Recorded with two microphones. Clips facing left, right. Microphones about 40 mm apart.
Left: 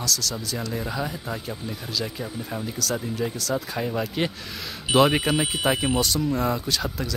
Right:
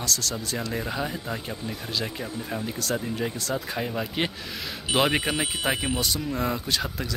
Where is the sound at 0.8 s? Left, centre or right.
Centre.